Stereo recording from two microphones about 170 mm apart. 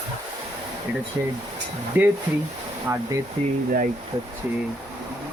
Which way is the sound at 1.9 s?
15° right (ahead or behind).